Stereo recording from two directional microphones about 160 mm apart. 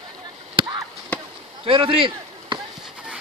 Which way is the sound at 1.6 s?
30° right (ahead or behind).